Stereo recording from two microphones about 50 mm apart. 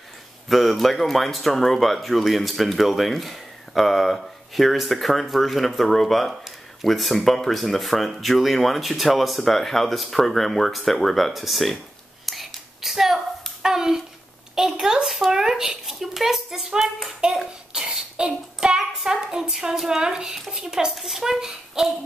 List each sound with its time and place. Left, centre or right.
0.5 s speech: centre
12.3 s whispering: centre
13.6 s a sound: centre
14.5 s speech: centre
17.2 s a sound: right
17.7 s speech: centre